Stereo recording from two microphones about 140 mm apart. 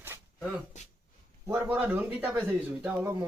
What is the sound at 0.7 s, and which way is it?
Speech, 60° left (ahead or behind).